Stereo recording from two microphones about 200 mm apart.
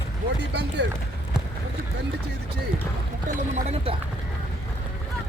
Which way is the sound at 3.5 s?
30° right (ahead or behind).